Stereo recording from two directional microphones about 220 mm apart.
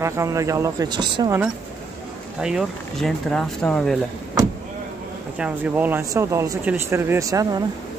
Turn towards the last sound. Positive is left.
turn(degrees=-15)  # may be behind; listen again after turning